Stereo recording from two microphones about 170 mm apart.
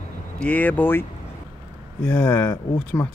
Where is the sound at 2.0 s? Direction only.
10° left (ahead or behind).